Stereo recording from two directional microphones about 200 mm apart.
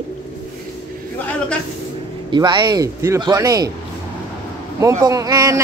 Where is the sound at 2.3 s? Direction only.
20° right (ahead or behind).